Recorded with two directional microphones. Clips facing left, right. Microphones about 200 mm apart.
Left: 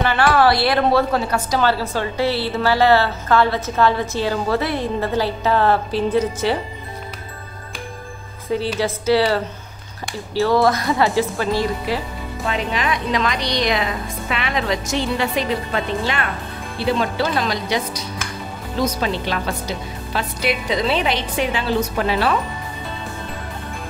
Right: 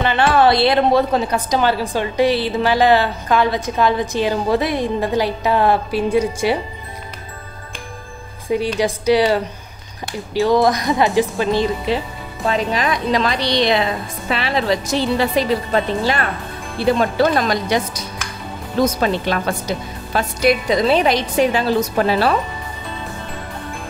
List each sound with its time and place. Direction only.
0.0 s a woman's voice: 20° right (ahead or behind)
8.7 s a woman's voice: 15° right (ahead or behind)
12.4 s a woman's voice: 35° right (ahead or behind)
17.0 s a woman's voice: 45° right (ahead or behind)